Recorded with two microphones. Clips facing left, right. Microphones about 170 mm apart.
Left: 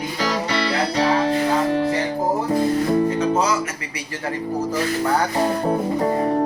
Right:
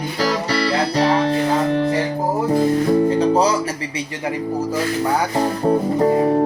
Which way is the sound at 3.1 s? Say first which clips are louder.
Right 4 dB; 35° right (ahead or behind).